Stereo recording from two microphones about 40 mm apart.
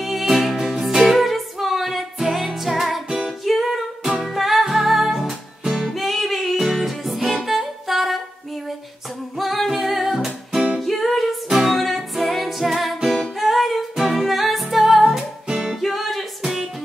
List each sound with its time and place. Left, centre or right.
0.0 s music: centre
5.9 s music: centre
9.4 s singing: centre
9.7 s music: centre
15.4 s music: right
15.8 s music: centre